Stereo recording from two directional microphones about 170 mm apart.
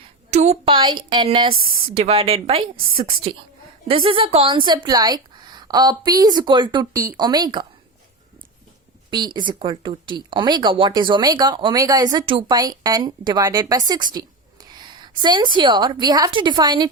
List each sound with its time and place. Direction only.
0.3 s a woman's voice: 40° right (ahead or behind); by 7.7 s 25° right (ahead or behind)
9.0 s speech: 25° right (ahead or behind)